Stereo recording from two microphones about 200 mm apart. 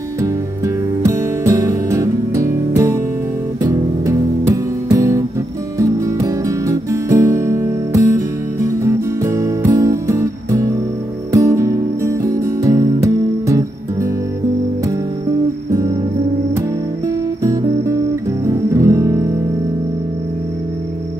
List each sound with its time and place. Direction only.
1.0 s music: 15° right (ahead or behind)
17.4 s music: 15° right (ahead or behind)
18.5 s guitar: 15° right (ahead or behind)